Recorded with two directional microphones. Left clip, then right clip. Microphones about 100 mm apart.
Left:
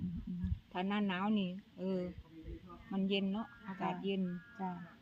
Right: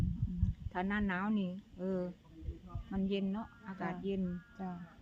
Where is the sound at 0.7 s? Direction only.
10° left (ahead or behind).